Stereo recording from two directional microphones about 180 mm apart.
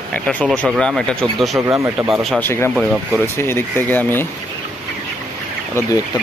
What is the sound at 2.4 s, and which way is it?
Speech, 15° left (ahead or behind).